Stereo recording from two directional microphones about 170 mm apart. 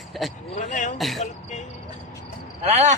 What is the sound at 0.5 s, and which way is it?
Speech, 50° left (ahead or behind).